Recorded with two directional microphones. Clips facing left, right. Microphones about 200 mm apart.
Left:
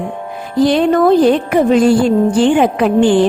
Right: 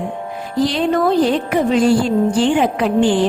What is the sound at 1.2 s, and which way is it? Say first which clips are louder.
A woman's voice: left 5 dB; 50° left (ahead or behind).